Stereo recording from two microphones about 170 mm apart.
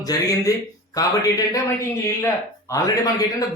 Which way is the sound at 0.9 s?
20° left (ahead or behind).